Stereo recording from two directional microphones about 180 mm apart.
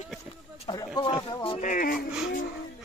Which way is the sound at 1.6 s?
45° left (ahead or behind).